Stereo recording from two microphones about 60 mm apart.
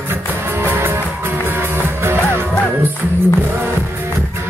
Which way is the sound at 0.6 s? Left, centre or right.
Right.